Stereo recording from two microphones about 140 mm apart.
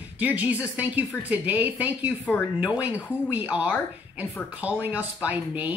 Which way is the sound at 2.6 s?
10° right (ahead or behind).